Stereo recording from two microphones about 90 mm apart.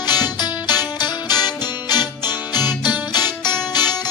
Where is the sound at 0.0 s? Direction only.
50° left (ahead or behind).